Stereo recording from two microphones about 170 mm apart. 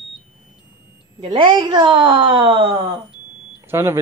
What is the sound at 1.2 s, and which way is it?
A woman's voice, 30° right (ahead or behind).